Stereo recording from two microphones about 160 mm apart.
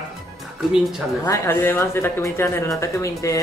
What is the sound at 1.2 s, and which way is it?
Speech, 15° left (ahead or behind).